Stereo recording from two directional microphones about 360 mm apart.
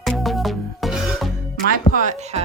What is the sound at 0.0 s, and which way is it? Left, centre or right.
Music, centre.